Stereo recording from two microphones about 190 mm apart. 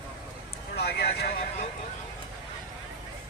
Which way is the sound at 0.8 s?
60° left (ahead or behind).